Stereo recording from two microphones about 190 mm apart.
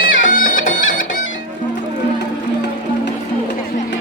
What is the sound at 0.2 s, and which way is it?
Bagpipes, 45° left (ahead or behind).